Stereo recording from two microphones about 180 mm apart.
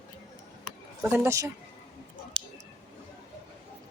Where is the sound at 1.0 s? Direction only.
10° right (ahead or behind).